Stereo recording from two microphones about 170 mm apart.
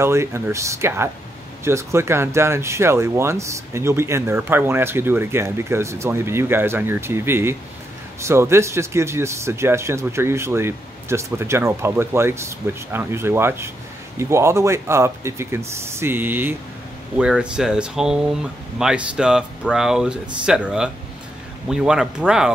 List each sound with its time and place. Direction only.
0.0 s speech: 15° right (ahead or behind)